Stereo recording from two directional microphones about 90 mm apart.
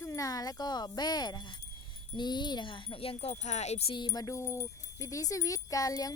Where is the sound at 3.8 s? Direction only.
65° left (ahead or behind).